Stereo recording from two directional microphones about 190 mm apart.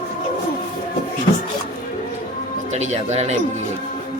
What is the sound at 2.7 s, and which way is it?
Speech, 35° right (ahead or behind).